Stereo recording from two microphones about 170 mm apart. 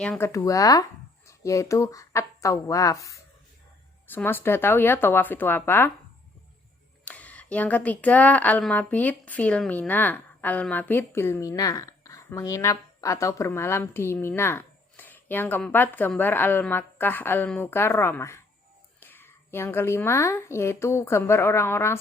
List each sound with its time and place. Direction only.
0.2 s speech: 20° left (ahead or behind)
7.0 s speech: 10° left (ahead or behind)